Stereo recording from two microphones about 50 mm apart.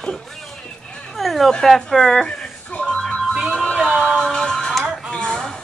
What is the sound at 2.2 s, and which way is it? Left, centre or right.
Music, centre.